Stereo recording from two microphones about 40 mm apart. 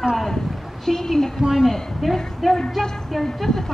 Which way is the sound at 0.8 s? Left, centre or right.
Centre.